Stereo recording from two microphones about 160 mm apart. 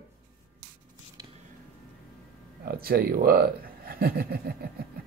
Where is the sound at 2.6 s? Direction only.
70° right (ahead or behind).